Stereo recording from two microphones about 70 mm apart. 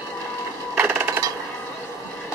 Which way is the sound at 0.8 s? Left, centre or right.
Right.